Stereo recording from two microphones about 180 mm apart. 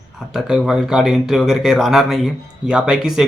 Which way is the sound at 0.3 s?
5° right (ahead or behind).